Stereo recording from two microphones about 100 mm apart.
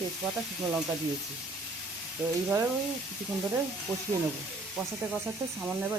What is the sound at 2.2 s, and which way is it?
Frying, 10° right (ahead or behind).